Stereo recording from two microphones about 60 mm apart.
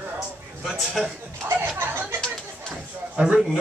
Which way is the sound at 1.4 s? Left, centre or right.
Right.